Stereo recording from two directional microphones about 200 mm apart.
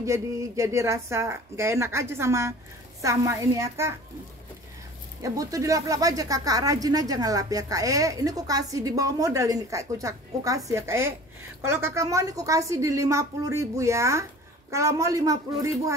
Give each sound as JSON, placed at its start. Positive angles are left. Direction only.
{"t": 0.0, "sound": "speech", "side_deg": -15}
{"t": 5.2, "sound": "speech", "side_deg": -15}